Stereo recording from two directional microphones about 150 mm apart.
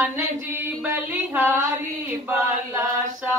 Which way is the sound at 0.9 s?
15° right (ahead or behind).